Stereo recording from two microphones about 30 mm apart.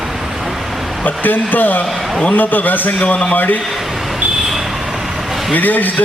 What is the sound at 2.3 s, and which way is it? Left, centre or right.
Speech, left.